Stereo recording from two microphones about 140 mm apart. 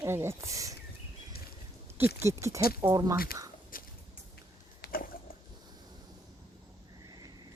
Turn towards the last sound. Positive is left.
turn(degrees=-30)  # may be behind; listen again after turning